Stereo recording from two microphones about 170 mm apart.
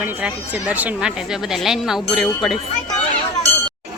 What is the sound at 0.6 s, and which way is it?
Speech, 10° right (ahead or behind).